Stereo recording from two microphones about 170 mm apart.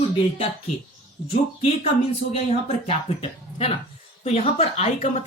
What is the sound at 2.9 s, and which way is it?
Speech, 35° left (ahead or behind).